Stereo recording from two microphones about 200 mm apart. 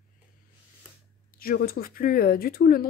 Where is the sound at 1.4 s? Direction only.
50° left (ahead or behind).